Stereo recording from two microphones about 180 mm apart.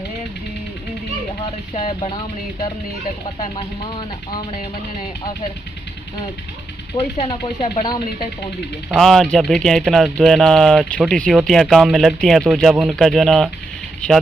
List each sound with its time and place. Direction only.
1.7 s speech: 35° left (ahead or behind)
7.2 s speech: 25° left (ahead or behind)
8.9 s speech: centre (ahead or behind)